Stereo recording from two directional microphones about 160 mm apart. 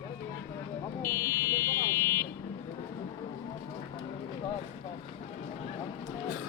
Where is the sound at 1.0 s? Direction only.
15° left (ahead or behind).